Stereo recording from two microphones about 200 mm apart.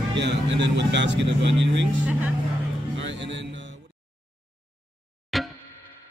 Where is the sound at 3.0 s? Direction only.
65° right (ahead or behind).